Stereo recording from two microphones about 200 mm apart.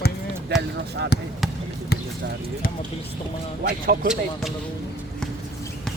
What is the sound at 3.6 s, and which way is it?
Speech, 45° right (ahead or behind).